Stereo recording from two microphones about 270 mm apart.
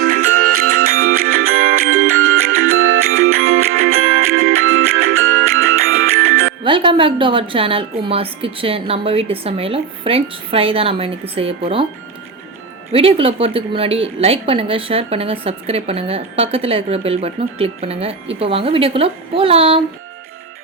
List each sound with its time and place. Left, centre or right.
0.0 s music: right
6.7 s a woman's voice: centre
12.9 s a woman's voice: right